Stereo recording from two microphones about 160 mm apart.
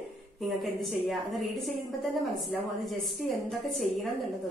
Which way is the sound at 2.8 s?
Centre (ahead or behind).